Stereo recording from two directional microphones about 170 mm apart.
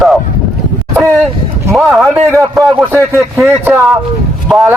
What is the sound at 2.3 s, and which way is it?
Speech, 15° right (ahead or behind).